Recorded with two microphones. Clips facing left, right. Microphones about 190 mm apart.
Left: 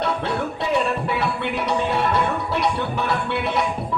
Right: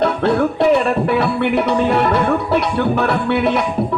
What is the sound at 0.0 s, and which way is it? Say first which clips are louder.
Music: right 8 dB; 65° right (ahead or behind).